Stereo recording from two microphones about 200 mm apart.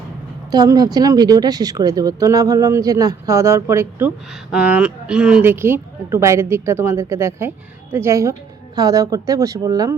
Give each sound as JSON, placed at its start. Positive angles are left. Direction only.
{"t": 0.5, "sound": "a woman's voice", "side_deg": -20}